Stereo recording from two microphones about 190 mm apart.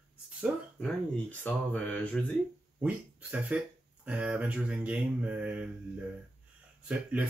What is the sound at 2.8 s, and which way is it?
Speech, 5° right (ahead or behind).